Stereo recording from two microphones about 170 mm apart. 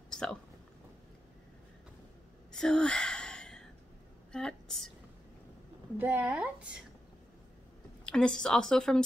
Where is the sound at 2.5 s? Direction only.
5° left (ahead or behind).